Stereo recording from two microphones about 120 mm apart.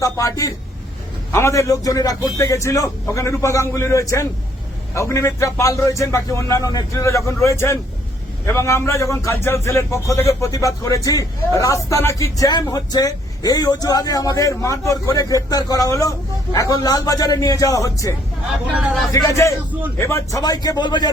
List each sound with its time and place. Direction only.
0.0 s a man's voice: 25° left (ahead or behind)
19.1 s a man's voice: 25° left (ahead or behind)